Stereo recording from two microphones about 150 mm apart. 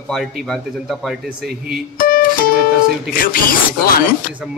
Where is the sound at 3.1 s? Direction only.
75° left (ahead or behind).